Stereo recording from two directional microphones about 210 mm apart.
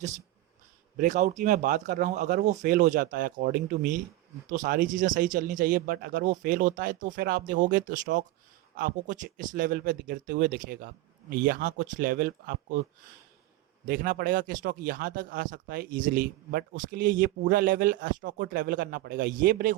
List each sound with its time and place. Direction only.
0.9 s speech: 35° right (ahead or behind)
13.8 s speech: 40° right (ahead or behind)